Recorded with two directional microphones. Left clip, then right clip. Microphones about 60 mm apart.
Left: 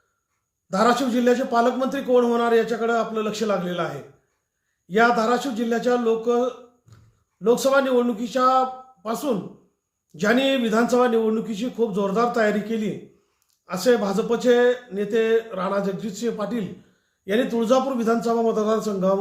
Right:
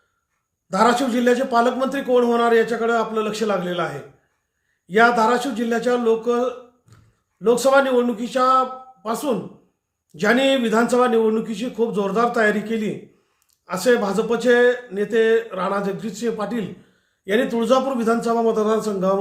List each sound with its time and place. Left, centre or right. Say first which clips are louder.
0.7 s a man's voice: right 2 dB; right
6.9 s a sound: right 2 dB; right
7.4 s a man's voice: right 3 dB; right